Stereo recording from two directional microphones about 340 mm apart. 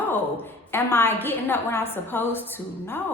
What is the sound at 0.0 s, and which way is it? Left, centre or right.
A woman's voice, centre.